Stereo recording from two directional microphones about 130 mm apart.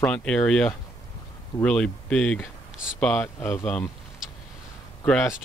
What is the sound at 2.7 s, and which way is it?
Speech, 5° right (ahead or behind).